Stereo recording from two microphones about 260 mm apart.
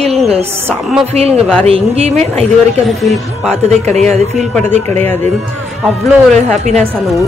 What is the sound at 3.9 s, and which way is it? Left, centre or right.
Speech, centre.